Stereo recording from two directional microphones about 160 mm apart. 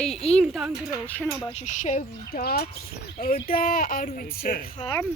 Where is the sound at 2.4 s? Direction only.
80° left.